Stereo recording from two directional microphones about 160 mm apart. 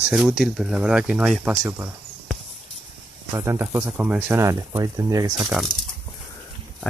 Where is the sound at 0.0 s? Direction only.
5° right (ahead or behind).